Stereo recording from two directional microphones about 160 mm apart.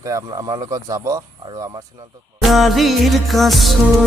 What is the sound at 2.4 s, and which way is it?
Music, centre (ahead or behind).